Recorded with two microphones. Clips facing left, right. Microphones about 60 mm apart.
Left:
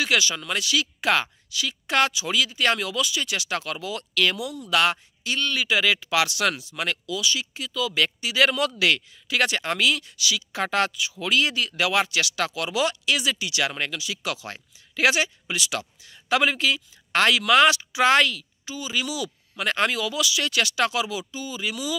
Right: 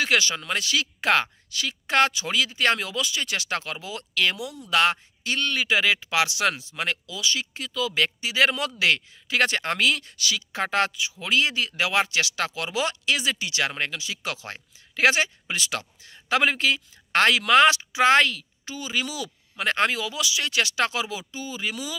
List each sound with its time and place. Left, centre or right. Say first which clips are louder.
0.0 s speech: even; right